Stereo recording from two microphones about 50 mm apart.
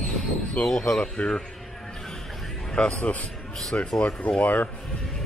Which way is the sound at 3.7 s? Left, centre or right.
Left.